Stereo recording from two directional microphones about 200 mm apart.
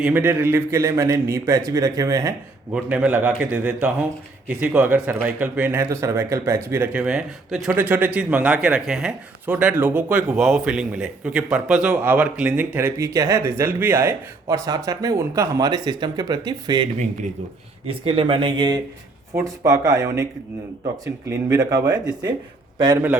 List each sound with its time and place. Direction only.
0.0 s speech: 10° right (ahead or behind)
2.7 s speech: 5° right (ahead or behind)